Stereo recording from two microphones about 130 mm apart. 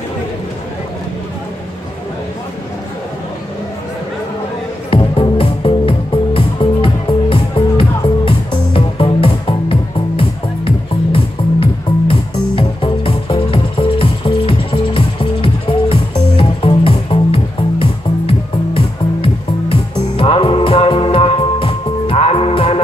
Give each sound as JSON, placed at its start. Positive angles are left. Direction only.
{"t": 4.9, "sound": "music", "side_deg": 40}